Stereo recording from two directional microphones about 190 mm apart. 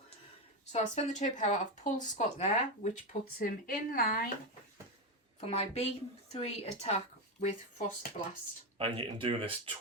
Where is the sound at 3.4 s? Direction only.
50° left (ahead or behind).